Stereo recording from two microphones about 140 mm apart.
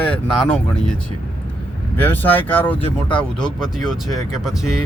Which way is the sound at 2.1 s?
15° left (ahead or behind).